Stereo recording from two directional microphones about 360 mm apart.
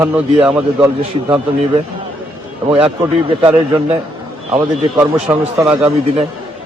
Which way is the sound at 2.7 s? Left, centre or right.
Centre.